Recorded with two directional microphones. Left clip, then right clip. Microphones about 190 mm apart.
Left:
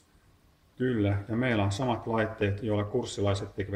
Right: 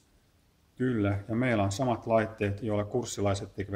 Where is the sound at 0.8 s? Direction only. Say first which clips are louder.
Left 1 dB; 35° right (ahead or behind).